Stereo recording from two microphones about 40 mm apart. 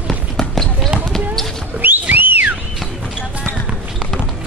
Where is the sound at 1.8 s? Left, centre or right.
Right.